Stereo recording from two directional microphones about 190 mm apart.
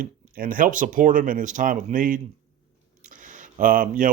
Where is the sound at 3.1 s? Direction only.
40° right (ahead or behind).